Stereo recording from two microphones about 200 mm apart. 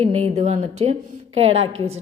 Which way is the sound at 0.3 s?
35° right (ahead or behind).